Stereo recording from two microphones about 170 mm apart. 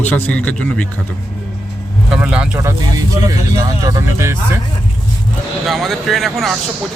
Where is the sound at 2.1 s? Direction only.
5° right (ahead or behind).